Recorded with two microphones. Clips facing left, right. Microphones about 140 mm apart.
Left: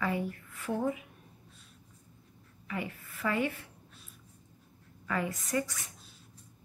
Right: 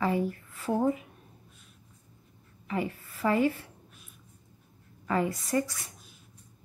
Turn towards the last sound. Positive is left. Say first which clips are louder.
# right 4 dB
turn(degrees=-35)  # may be behind; listen again after turning